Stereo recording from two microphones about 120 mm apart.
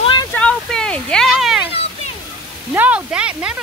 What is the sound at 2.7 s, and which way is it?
Speech, 15° right (ahead or behind).